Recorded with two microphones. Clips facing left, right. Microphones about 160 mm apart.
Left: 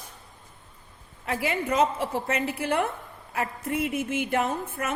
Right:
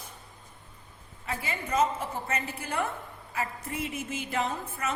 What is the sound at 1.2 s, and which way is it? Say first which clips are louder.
A woman's voice: left 7 dB; 65° left (ahead or behind).